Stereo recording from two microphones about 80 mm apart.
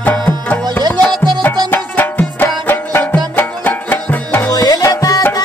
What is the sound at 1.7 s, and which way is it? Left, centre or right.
Music, left.